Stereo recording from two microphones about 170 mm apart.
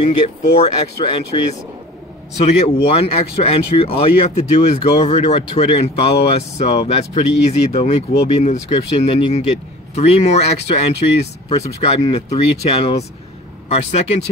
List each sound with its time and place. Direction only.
0.6 s speech: 30° left (ahead or behind)